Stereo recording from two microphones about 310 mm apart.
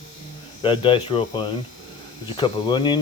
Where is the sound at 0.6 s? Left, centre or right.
Centre.